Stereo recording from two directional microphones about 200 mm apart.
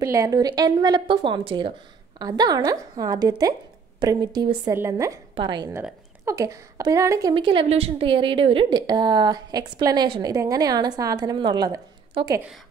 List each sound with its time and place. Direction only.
0.0 s a woman's voice: 15° right (ahead or behind)